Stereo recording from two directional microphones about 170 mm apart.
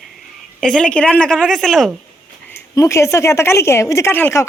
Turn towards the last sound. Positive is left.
turn(degrees=10)  # may be behind; listen again after turning